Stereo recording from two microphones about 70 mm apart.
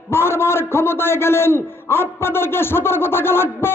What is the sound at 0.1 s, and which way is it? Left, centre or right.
A man's voice, left.